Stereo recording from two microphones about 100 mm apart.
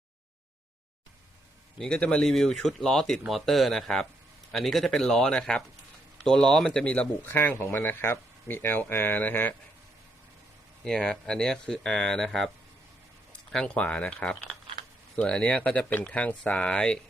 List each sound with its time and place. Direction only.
1.8 s speech: 10° left (ahead or behind)
10.8 s speech: 10° left (ahead or behind)
13.5 s speech: 10° left (ahead or behind)